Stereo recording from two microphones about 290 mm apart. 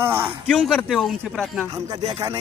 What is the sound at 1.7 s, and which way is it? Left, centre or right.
Speech, centre.